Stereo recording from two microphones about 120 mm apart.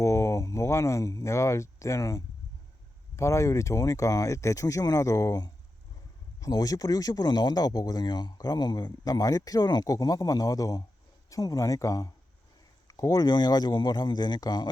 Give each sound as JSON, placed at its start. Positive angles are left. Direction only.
{"t": 0.0, "sound": "speech", "side_deg": 25}